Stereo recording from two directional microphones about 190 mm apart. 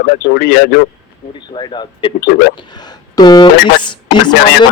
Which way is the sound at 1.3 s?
25° left (ahead or behind).